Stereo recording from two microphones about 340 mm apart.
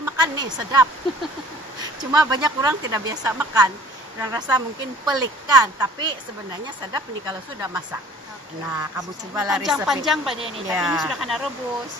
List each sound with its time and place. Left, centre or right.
0.0 s a woman's voice: centre
10.3 s speech: centre
10.8 s speech: centre